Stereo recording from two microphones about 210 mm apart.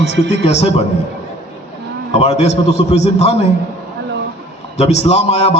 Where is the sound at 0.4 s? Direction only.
30° left (ahead or behind).